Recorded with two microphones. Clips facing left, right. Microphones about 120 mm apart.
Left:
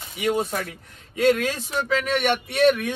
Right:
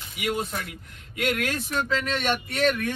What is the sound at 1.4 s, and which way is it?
Speech, 20° left (ahead or behind).